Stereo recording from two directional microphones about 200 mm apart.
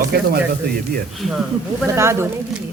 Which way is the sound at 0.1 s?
55° right (ahead or behind).